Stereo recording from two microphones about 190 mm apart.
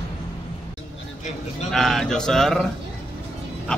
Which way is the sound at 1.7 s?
Centre (ahead or behind).